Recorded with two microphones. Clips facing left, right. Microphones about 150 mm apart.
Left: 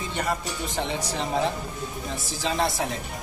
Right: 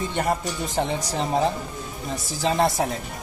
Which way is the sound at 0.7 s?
40° right (ahead or behind).